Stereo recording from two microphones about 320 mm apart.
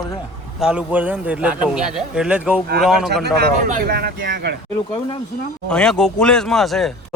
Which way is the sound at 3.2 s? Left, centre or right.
Right.